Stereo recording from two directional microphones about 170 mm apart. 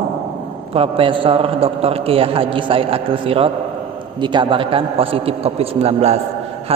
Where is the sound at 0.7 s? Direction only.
30° right (ahead or behind).